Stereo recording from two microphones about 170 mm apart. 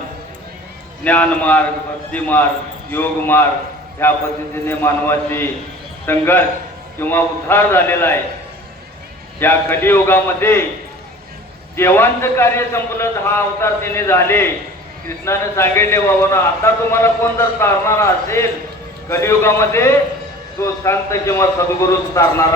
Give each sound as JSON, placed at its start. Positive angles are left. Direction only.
{"t": 1.0, "sound": "a man's voice", "side_deg": 10}
{"t": 9.4, "sound": "a man's voice", "side_deg": 15}
{"t": 11.8, "sound": "a man's voice", "side_deg": 15}